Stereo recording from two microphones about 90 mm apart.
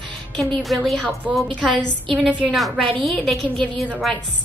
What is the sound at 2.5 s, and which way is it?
A woman's voice, centre (ahead or behind).